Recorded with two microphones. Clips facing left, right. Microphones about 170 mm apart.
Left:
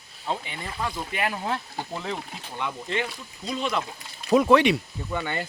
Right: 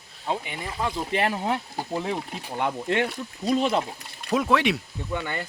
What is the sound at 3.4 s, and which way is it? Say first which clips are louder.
Speech: right 5 dB; 35° right (ahead or behind).